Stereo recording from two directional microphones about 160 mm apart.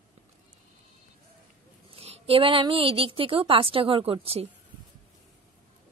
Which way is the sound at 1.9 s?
35° right (ahead or behind).